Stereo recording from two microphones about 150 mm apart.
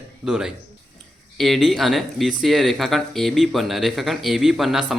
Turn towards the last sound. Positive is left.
turn(degrees=0)  # may be behind; listen again after turning